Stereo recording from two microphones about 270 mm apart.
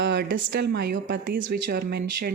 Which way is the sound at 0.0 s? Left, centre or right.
Right.